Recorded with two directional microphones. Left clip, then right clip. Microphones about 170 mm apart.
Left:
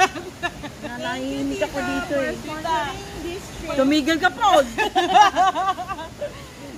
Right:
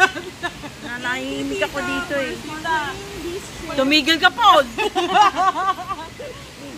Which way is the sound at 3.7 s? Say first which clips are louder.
Right 3 dB; 55° left (ahead or behind).